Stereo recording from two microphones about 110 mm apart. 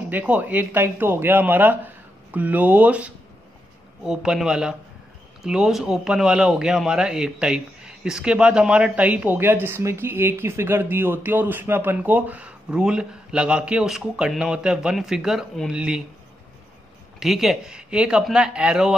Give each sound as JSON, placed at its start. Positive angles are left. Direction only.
{"t": 0.1, "sound": "a man's voice", "side_deg": -15}
{"t": 17.2, "sound": "a man's voice", "side_deg": 0}